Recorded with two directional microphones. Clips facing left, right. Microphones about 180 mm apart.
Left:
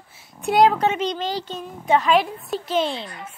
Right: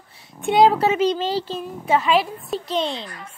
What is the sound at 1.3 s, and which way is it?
Speech, 30° right (ahead or behind).